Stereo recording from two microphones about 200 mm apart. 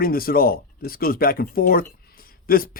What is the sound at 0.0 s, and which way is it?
A man's voice, 45° left (ahead or behind).